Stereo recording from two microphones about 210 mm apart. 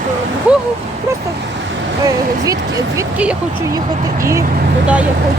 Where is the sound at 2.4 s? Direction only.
15° right (ahead or behind).